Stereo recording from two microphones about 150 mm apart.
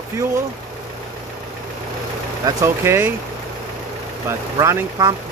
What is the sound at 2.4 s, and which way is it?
Speech, 20° right (ahead or behind).